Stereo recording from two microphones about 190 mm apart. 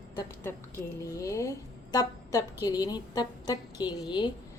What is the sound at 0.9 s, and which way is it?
A woman's voice, 15° left (ahead or behind).